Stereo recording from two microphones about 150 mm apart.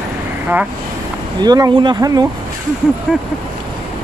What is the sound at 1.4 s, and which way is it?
Speech, 25° right (ahead or behind).